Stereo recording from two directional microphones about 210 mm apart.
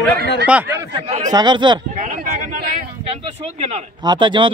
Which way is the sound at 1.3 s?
20° right (ahead or behind).